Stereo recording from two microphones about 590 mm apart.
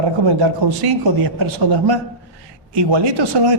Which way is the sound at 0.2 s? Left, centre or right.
Right.